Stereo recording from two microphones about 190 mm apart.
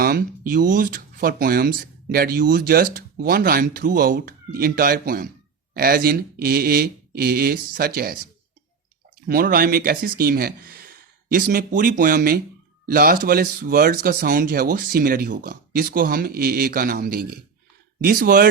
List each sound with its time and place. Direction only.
0.0 s speech: 50° right (ahead or behind)